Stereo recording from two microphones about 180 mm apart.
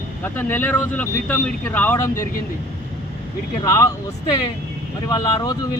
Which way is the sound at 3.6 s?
20° left (ahead or behind).